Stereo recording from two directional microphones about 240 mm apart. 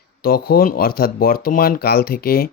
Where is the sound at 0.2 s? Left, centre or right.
Left.